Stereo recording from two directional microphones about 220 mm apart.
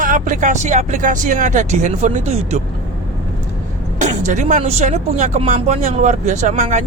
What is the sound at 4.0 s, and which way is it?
Speech, 35° right (ahead or behind).